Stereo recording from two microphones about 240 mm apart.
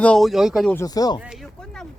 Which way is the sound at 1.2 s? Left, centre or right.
Centre.